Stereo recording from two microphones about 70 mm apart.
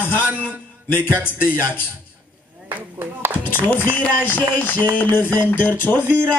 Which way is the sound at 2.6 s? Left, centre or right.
Right.